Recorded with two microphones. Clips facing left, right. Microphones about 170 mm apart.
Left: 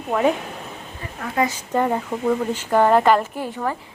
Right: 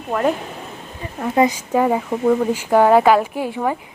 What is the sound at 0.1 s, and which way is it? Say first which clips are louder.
Speech: even; centre (ahead or behind).